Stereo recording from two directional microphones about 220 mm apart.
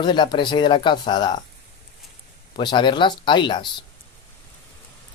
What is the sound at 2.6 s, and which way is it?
Speech, 20° left (ahead or behind).